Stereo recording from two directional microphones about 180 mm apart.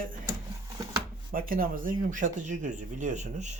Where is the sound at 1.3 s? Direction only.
50° right (ahead or behind).